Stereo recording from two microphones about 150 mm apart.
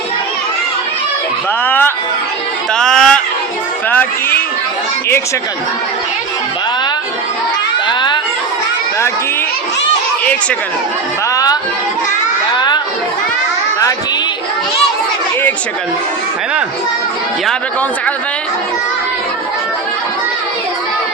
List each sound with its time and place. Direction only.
1.6 s a sound: 15° left (ahead or behind)
3.8 s music: 10° left (ahead or behind)
7.9 s crowd: 30° left (ahead or behind)
12.5 s children playing: 30° left (ahead or behind)